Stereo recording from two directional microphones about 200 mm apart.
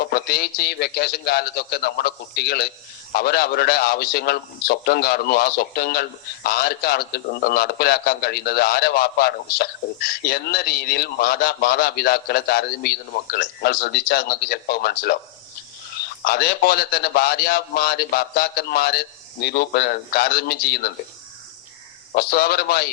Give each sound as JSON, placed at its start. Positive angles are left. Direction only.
{"t": 0.0, "sound": "a man's voice", "side_deg": 50}
{"t": 22.1, "sound": "a man's voice", "side_deg": 50}